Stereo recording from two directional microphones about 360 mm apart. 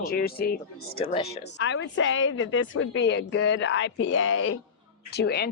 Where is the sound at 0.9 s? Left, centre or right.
Centre.